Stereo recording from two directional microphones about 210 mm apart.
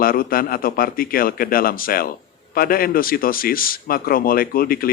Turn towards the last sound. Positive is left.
turn(degrees=45)  # may be behind; listen again after turning